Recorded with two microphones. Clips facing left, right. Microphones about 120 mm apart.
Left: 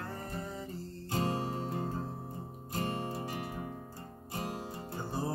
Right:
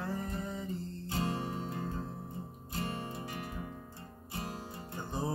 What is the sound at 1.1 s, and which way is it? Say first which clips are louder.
Music: left 2 dB; 45° left (ahead or behind).